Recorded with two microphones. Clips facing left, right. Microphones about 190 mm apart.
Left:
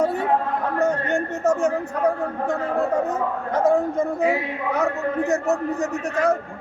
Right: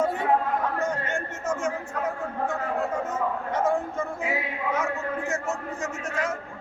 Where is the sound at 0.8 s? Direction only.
35° left (ahead or behind).